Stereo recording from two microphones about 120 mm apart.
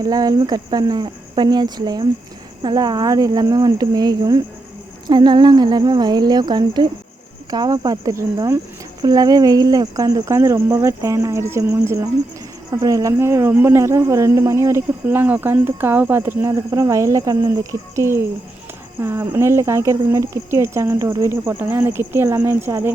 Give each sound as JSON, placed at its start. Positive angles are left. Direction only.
{"t": 0.0, "sound": "speech", "side_deg": -35}